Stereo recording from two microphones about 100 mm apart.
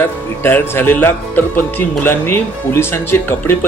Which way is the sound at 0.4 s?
25° left (ahead or behind).